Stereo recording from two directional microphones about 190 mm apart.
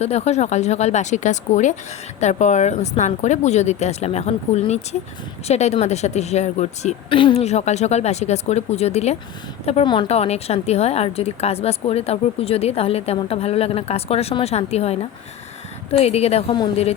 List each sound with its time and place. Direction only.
0.0 s speech: 35° left (ahead or behind)